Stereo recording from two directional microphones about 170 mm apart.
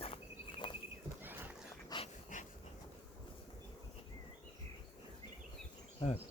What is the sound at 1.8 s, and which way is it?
Dog, 30° left (ahead or behind).